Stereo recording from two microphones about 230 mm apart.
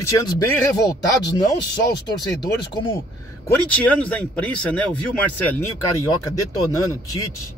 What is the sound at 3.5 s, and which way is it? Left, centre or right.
Speech, centre.